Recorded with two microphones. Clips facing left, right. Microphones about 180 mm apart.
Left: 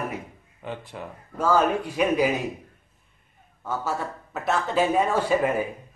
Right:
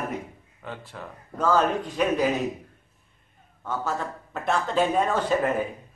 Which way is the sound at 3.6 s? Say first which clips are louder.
Left 1 dB; 10° left (ahead or behind).